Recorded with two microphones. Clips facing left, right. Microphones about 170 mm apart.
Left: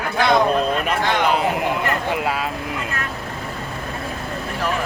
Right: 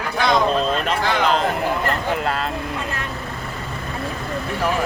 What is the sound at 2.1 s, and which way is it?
Speech, 10° left (ahead or behind).